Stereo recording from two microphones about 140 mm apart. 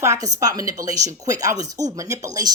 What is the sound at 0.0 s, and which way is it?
Speech, 25° right (ahead or behind).